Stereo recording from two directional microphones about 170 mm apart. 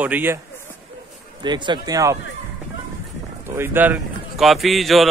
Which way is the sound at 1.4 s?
25° right (ahead or behind).